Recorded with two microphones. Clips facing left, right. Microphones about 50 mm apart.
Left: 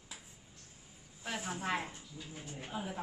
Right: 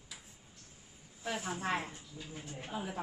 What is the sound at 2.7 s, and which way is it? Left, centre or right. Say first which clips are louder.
Speech: right 1 dB; centre.